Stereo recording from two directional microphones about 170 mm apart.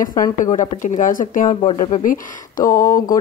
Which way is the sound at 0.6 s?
50° left (ahead or behind).